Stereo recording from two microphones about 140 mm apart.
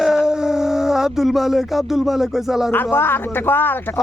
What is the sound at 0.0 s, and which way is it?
Speech, 5° right (ahead or behind).